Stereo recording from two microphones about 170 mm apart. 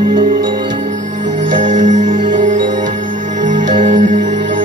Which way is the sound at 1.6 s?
45° right (ahead or behind).